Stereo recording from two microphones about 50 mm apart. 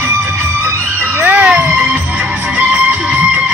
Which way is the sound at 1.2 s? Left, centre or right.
Right.